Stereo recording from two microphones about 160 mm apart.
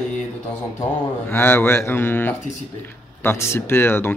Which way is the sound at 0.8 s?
15° left (ahead or behind).